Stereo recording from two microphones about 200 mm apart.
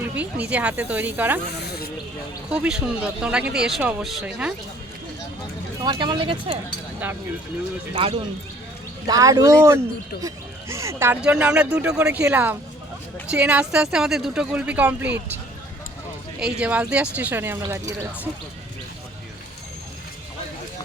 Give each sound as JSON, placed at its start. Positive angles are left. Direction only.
{"t": 0.0, "sound": "speech", "side_deg": -5}
{"t": 1.5, "sound": "speech", "side_deg": 55}
{"t": 2.5, "sound": "a woman's voice", "side_deg": -5}
{"t": 5.8, "sound": "speech", "side_deg": -25}
{"t": 9.0, "sound": "a woman's voice", "side_deg": -15}
{"t": 16.4, "sound": "speech", "side_deg": -5}